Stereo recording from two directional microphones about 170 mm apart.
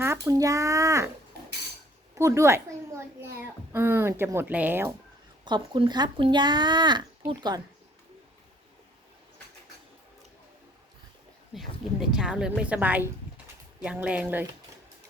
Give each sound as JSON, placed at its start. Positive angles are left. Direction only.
{"t": 0.0, "sound": "speech", "side_deg": -20}
{"t": 2.1, "sound": "a child's voice", "side_deg": -15}
{"t": 5.5, "sound": "speech", "side_deg": -30}
{"t": 11.5, "sound": "speech", "side_deg": 0}